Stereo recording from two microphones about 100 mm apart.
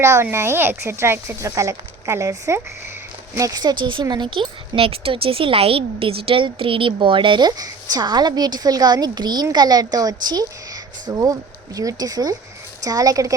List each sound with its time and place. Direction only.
0.0 s a woman's voice: 25° right (ahead or behind)